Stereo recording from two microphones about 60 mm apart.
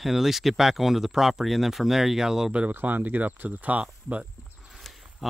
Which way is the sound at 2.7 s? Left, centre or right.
Right.